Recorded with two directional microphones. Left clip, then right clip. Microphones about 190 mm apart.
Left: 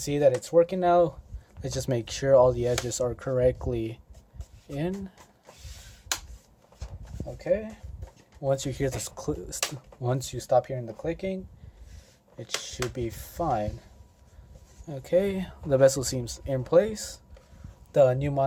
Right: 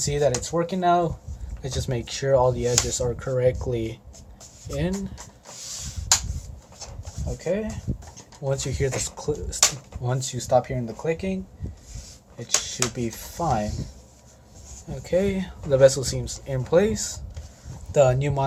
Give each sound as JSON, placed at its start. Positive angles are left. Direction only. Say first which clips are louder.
{"t": 0.0, "sound": "speech", "louder": "even", "side_deg": 60}
{"t": 7.4, "sound": "speech", "louder": "even", "side_deg": 55}
{"t": 12.6, "sound": "speech", "louder": "right 4 dB", "side_deg": 60}
{"t": 14.8, "sound": "speech", "louder": "right 1 dB", "side_deg": 60}
{"t": 17.9, "sound": "speech", "louder": "right 2 dB", "side_deg": 50}